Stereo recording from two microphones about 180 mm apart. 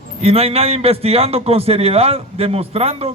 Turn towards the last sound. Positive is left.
turn(degrees=-35)  # may be behind; listen again after turning